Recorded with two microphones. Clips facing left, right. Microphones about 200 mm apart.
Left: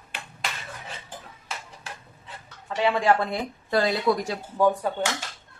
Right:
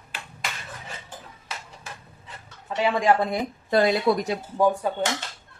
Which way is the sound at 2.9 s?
15° right (ahead or behind).